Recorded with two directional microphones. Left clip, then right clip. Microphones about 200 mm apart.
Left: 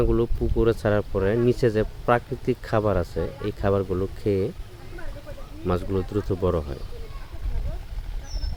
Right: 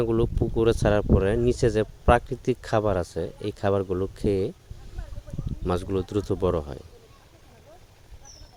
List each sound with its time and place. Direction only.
0.0 s speech: 45° right (ahead or behind)
5.6 s speech: 45° right (ahead or behind)